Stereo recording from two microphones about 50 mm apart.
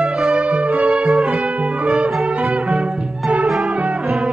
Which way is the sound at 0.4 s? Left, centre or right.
Right.